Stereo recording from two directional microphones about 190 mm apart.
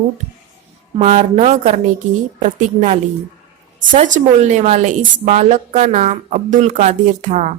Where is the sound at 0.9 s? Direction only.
35° right (ahead or behind).